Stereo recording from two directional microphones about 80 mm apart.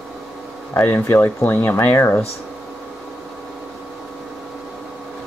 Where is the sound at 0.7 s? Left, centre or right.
Left.